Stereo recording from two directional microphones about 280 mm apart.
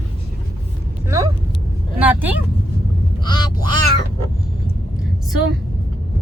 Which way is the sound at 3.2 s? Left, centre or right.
Centre.